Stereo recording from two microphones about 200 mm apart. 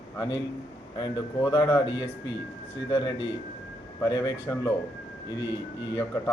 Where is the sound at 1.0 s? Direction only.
20° left (ahead or behind).